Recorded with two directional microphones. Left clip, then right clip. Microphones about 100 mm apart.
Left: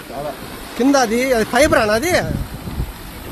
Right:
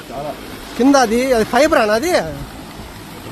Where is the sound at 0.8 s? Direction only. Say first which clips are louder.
Right 2 dB; 35° right (ahead or behind); by 2.3 s 15° right (ahead or behind).